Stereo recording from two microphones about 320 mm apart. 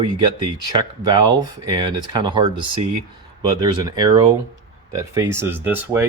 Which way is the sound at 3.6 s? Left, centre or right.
Centre.